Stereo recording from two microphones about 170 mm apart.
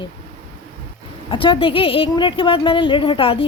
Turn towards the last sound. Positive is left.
turn(degrees=30)  # may be behind; listen again after turning